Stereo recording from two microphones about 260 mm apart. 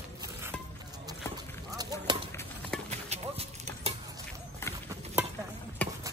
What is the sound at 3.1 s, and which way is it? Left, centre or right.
Clip-clop, right.